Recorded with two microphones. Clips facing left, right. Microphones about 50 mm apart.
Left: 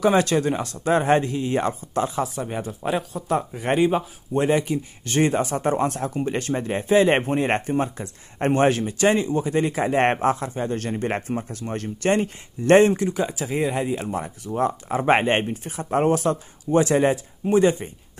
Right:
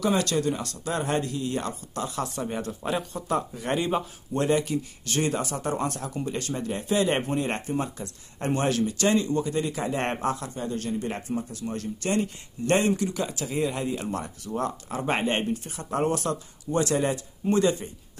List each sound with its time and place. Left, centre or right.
0.0 s speech: left
2.2 s speech: centre
3.3 s speech: left
3.8 s speech: centre
9.6 s speech: left
10.2 s speech: left
10.7 s speech: left
15.0 s speech: left; by 17.6 s centre